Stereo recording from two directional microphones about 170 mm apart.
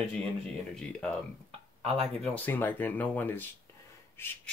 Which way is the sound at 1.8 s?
35° right (ahead or behind).